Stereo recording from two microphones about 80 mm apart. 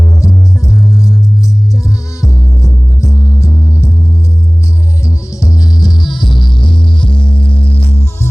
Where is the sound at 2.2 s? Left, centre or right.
Left.